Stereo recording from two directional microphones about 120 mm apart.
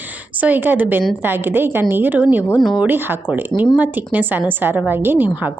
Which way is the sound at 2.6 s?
Centre (ahead or behind).